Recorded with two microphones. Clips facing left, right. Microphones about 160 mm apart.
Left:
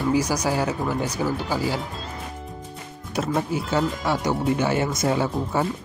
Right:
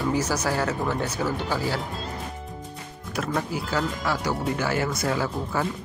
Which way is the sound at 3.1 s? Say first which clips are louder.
Left 3 dB; 25° left (ahead or behind).